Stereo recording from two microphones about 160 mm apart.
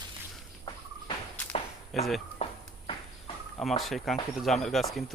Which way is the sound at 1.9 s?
Centre (ahead or behind).